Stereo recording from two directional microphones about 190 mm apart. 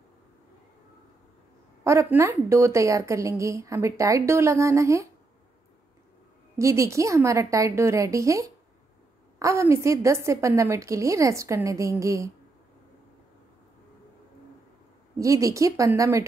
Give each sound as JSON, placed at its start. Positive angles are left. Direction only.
{"t": 1.9, "sound": "a woman's voice", "side_deg": -15}
{"t": 6.6, "sound": "a woman's voice", "side_deg": -15}
{"t": 15.1, "sound": "a woman's voice", "side_deg": -15}